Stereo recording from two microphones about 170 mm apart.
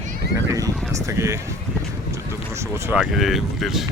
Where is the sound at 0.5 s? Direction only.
20° right (ahead or behind).